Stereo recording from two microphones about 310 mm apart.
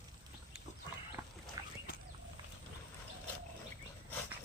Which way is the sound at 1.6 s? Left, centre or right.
Centre.